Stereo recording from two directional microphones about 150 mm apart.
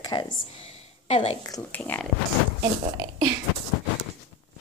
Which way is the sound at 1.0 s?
45° left (ahead or behind).